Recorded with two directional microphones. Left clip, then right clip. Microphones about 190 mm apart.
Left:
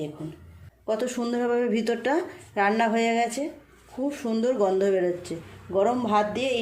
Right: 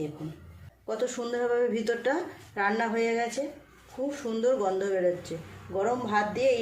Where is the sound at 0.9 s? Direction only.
35° left (ahead or behind).